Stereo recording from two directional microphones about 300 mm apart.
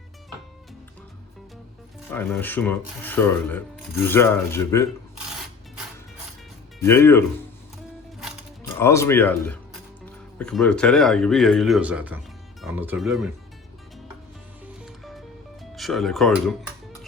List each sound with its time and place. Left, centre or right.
2.0 s speech: centre
6.7 s speech: centre
8.8 s speech: centre
14.8 s music: centre
15.7 s speech: centre